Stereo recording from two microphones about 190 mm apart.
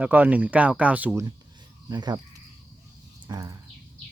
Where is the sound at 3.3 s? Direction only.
20° right (ahead or behind).